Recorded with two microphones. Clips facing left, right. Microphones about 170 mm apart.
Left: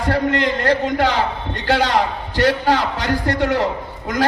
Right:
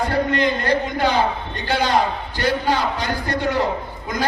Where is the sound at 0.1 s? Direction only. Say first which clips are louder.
Left 1 dB; 80° left.